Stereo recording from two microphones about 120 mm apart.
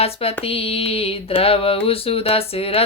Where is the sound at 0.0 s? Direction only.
55° left (ahead or behind).